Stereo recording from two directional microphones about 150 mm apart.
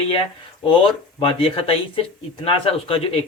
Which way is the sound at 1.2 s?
40° left (ahead or behind).